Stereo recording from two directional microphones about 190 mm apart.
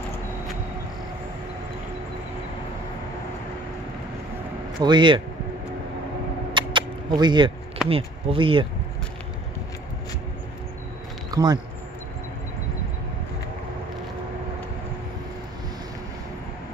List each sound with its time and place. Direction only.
4.7 s speech: 25° right (ahead or behind)
6.5 s single-lens reflex camera: 25° right (ahead or behind)
7.9 s speech: 30° right (ahead or behind)
11.2 s speech: 20° right (ahead or behind)